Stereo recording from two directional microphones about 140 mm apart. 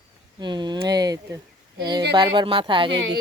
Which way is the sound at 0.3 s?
30° right (ahead or behind).